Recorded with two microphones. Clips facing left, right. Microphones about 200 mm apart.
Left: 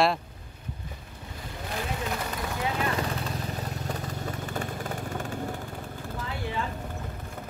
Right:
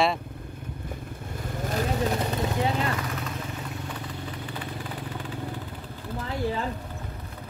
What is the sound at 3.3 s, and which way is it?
Vehicle, 40° left (ahead or behind).